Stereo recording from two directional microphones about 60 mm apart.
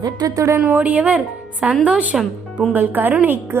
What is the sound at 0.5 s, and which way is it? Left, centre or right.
A woman's voice, right.